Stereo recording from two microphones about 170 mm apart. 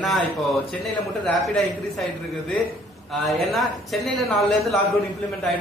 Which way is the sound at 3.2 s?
Centre (ahead or behind).